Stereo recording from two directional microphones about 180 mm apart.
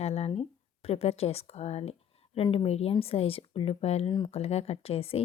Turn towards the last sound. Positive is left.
turn(degrees=30)  # may be behind; listen again after turning